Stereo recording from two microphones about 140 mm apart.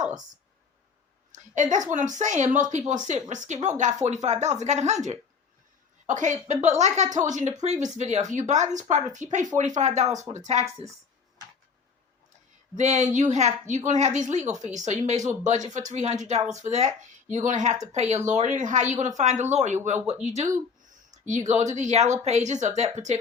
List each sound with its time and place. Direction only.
1.3 s a woman's voice: 60° right (ahead or behind)
10.7 s speech: 20° right (ahead or behind)
12.7 s a woman's voice: 55° right (ahead or behind)
21.2 s a woman's voice: 60° right (ahead or behind)